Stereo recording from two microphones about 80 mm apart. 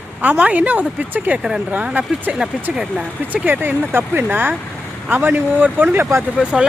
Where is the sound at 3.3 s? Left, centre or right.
Right.